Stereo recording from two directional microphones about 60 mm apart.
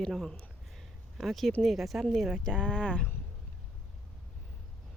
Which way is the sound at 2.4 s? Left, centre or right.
Centre.